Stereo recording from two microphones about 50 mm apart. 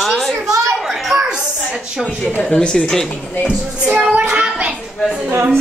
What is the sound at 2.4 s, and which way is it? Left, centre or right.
Speech, centre.